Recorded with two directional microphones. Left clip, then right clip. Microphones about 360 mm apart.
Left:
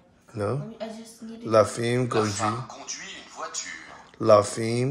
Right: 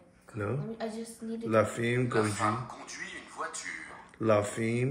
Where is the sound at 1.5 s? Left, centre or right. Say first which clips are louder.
Left 7 dB; centre.